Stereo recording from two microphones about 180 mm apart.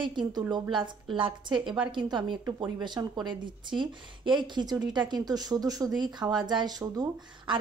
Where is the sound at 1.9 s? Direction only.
25° right (ahead or behind).